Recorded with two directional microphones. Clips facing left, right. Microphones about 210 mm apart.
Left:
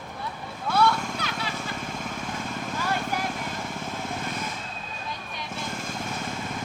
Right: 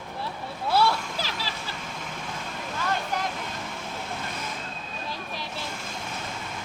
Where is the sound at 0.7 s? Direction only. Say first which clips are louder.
Left 1 dB; 30° right (ahead or behind).